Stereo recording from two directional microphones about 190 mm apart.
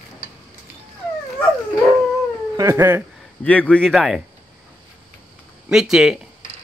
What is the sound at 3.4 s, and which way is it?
Speech, 10° left (ahead or behind).